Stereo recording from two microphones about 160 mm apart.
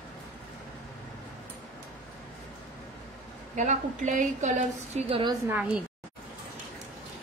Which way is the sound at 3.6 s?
50° right (ahead or behind).